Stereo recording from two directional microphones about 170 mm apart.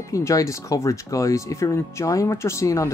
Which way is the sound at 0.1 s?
20° left (ahead or behind).